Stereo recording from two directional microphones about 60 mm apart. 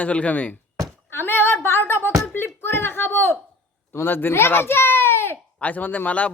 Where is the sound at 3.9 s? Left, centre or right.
Left.